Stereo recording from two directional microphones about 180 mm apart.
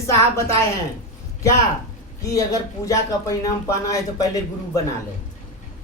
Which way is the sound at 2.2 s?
20° left (ahead or behind).